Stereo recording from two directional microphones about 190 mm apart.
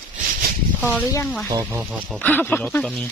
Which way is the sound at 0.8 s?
10° left (ahead or behind).